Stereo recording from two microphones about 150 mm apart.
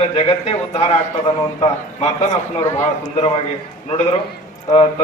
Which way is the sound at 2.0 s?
50° left (ahead or behind).